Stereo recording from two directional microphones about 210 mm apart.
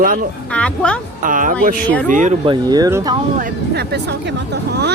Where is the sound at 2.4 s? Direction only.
20° right (ahead or behind).